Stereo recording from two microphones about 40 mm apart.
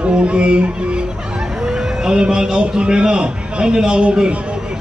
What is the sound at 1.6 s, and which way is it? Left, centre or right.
A man's voice, centre.